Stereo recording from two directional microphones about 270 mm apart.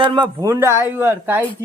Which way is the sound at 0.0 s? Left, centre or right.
Centre.